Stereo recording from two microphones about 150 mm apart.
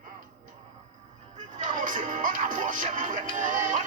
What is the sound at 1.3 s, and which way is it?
Music, 55° right (ahead or behind).